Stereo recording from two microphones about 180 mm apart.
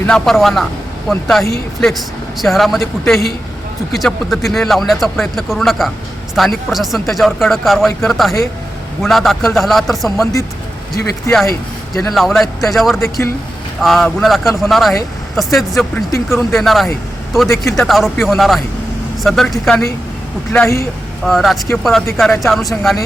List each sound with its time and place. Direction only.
0.0 s speech: 5° left (ahead or behind)
3.9 s speech: centre (ahead or behind)
11.3 s speech: 15° left (ahead or behind)
12.1 s speech: centre (ahead or behind)
16.1 s speech: 15° left (ahead or behind)
16.6 s speech: centre (ahead or behind)
20.5 s speech: 15° left (ahead or behind)
21.2 s speech: centre (ahead or behind)